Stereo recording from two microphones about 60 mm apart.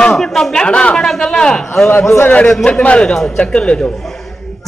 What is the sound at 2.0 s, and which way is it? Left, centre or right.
Speech, left.